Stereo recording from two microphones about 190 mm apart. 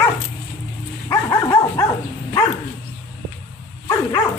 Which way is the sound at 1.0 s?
20° left (ahead or behind).